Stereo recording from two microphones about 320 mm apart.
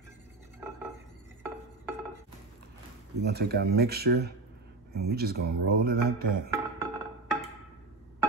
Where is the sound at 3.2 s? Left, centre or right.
Right.